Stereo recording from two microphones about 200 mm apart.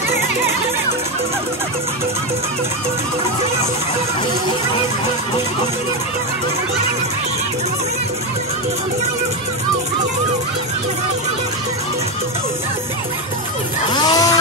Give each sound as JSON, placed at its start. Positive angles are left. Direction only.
{"t": 13.9, "sound": "vehicle", "side_deg": 20}